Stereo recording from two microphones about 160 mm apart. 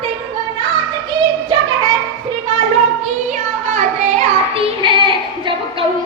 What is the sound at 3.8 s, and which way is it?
Child singing, 40° right (ahead or behind).